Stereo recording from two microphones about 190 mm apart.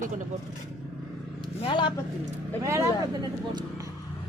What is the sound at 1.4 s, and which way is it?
Speech, 25° left (ahead or behind).